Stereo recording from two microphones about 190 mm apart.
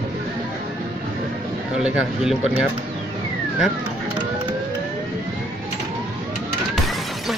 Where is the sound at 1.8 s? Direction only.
Centre (ahead or behind).